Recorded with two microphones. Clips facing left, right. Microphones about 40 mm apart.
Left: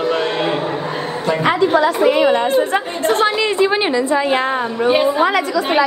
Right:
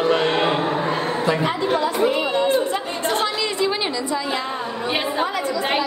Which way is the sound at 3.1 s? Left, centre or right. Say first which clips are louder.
Left 7 dB; left.